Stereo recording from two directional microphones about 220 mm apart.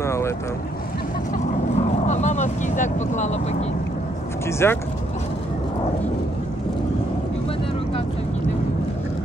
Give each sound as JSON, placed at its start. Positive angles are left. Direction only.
{"t": 0.0, "sound": "vehicle", "side_deg": 10}
{"t": 1.3, "sound": "vehicle", "side_deg": 30}
{"t": 4.5, "sound": "speech", "side_deg": 10}